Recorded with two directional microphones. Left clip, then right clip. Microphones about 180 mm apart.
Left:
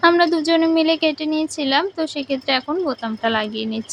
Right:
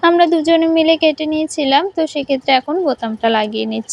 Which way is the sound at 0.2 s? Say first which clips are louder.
Right 4 dB; 15° right (ahead or behind).